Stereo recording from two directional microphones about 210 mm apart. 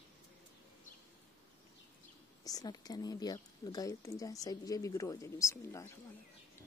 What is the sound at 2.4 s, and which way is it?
A woman's voice, 20° left (ahead or behind).